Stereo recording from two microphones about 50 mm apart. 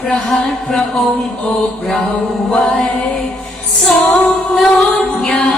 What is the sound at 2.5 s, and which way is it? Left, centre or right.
Chant, centre.